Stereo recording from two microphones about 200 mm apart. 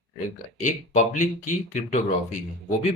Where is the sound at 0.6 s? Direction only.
40° left (ahead or behind).